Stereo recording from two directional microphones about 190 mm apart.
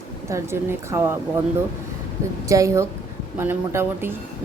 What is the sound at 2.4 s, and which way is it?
A woman's voice, 15° right (ahead or behind).